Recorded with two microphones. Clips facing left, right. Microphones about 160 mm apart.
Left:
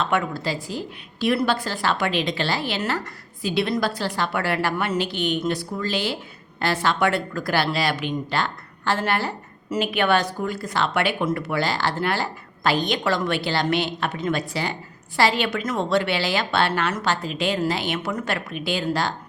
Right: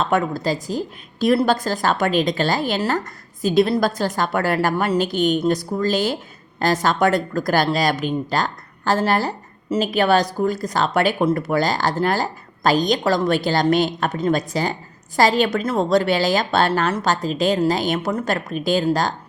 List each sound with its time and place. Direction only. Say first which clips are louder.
0.0 s a woman's voice: right 4 dB; 40° right (ahead or behind)